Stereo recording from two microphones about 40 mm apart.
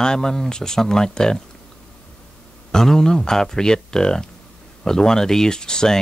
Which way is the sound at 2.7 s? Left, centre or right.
Centre.